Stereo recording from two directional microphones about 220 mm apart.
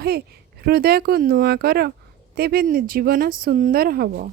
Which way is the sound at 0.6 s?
45° right (ahead or behind).